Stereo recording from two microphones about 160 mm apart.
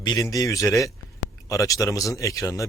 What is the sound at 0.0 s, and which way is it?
A man's voice, 25° left (ahead or behind).